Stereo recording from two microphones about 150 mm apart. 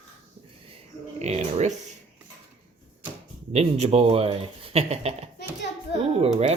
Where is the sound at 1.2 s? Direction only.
45° right (ahead or behind).